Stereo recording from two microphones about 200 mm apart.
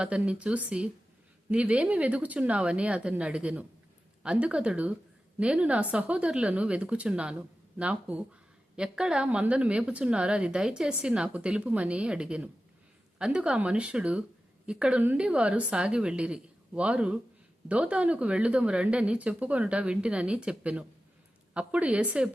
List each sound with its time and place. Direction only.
0.0 s speech: 5° right (ahead or behind)